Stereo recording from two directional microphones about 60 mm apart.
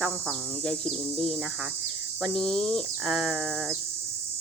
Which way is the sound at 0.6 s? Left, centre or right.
Centre.